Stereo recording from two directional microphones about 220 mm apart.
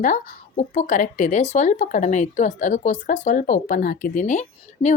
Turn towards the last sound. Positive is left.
turn(degrees=35)  # may be behind; listen again after turning